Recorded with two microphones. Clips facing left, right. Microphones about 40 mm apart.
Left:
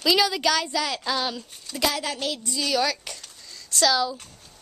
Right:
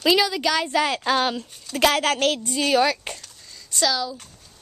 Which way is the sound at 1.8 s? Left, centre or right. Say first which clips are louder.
Right 7 dB; right.